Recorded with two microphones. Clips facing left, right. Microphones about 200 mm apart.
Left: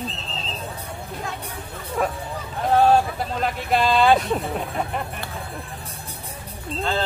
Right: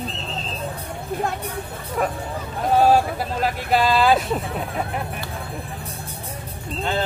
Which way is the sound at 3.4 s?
5° right (ahead or behind).